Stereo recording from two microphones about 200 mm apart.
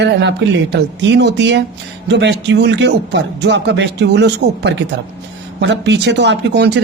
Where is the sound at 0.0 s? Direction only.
60° right (ahead or behind).